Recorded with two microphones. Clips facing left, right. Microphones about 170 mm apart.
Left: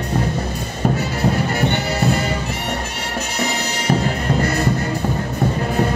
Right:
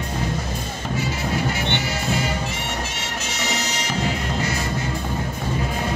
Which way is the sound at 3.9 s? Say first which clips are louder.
Left 8 dB; 55° left (ahead or behind).